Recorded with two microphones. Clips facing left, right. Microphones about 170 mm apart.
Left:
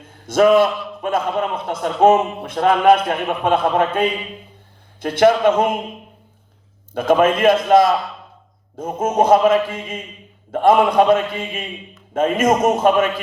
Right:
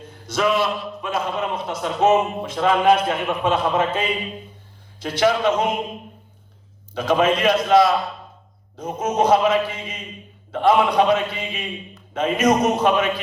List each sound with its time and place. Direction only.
0.3 s a man's voice: 50° left (ahead or behind)
6.9 s a man's voice: 50° left (ahead or behind)